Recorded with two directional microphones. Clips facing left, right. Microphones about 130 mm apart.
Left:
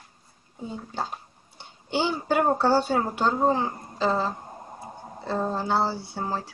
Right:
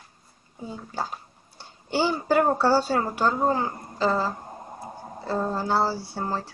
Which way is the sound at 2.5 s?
20° left (ahead or behind).